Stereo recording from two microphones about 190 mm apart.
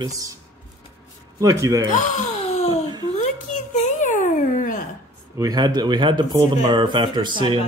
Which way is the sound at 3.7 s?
40° left (ahead or behind).